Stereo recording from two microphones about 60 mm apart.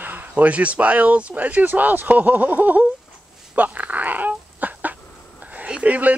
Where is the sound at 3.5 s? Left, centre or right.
Right.